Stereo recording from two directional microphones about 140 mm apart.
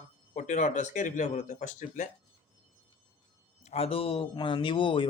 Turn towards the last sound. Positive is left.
turn(degrees=35)  # may be behind; listen again after turning